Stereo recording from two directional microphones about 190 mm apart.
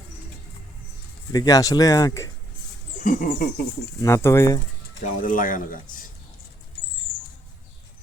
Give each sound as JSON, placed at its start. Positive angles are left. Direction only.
{"t": 1.3, "sound": "speech", "side_deg": 20}
{"t": 3.0, "sound": "speech", "side_deg": 45}
{"t": 4.0, "sound": "speech", "side_deg": 15}
{"t": 5.2, "sound": "speech", "side_deg": 45}